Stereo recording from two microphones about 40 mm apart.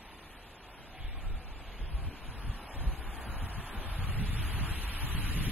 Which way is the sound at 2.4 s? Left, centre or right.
Right.